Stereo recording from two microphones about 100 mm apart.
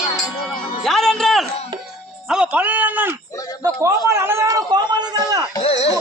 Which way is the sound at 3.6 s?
30° right (ahead or behind).